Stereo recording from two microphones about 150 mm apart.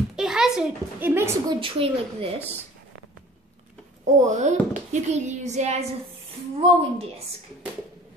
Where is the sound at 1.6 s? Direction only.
40° right (ahead or behind).